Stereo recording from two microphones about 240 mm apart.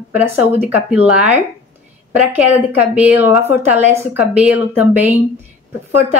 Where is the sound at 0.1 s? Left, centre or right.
Centre.